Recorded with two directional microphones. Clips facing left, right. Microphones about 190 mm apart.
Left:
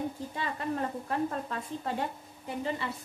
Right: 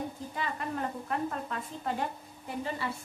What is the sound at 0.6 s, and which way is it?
Speech, 30° left (ahead or behind).